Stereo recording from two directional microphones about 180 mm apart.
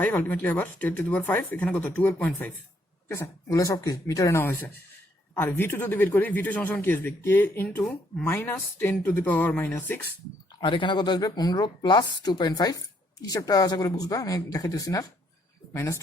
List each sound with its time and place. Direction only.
0.0 s a man's voice: 10° left (ahead or behind)
10.6 s a woman's voice: 25° left (ahead or behind)